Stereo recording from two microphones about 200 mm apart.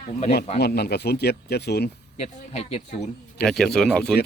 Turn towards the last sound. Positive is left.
turn(degrees=5)  # may be behind; listen again after turning